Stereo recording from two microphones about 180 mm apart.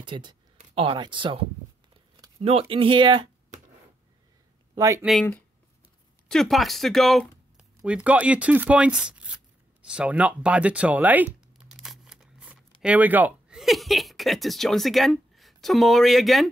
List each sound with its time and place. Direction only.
0.0 s speech: 25° right (ahead or behind)
2.4 s speech: 30° right (ahead or behind)
4.7 s speech: 15° right (ahead or behind)
6.2 s speech: centre (ahead or behind)